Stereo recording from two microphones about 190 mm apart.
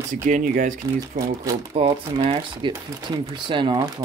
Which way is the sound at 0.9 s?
20° right (ahead or behind).